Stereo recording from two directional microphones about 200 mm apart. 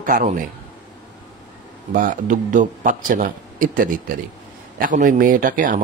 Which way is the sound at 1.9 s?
40° right (ahead or behind).